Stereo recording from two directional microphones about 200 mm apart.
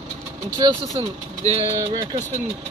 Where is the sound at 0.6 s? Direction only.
25° right (ahead or behind).